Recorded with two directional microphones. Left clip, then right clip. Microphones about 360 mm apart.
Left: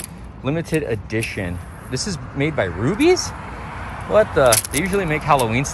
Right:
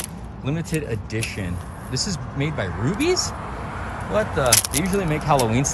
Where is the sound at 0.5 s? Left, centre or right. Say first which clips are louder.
Left 6 dB; centre.